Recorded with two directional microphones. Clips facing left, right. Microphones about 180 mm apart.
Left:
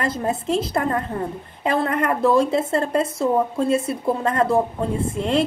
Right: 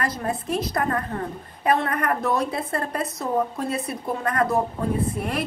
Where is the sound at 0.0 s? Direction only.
25° left (ahead or behind).